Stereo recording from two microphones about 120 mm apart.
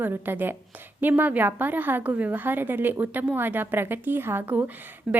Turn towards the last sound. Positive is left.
turn(degrees=-15)  # may be behind; listen again after turning